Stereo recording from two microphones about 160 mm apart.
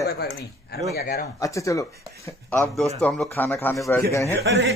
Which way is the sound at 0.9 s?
75° left (ahead or behind).